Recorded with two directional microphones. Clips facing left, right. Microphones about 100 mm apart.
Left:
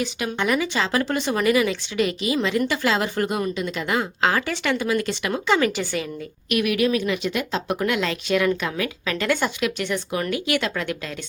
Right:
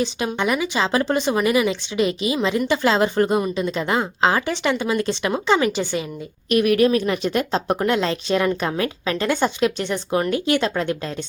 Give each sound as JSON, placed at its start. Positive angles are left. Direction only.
{"t": 0.3, "sound": "speech", "side_deg": -20}
{"t": 6.5, "sound": "speech", "side_deg": -40}